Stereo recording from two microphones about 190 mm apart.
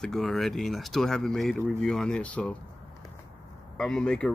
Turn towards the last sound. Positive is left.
turn(degrees=5)  # may be behind; listen again after turning